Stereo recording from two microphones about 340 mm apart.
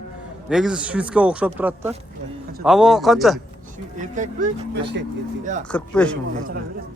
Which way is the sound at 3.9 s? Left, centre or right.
Right.